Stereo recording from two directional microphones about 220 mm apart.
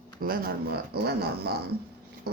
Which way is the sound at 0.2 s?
40° right (ahead or behind).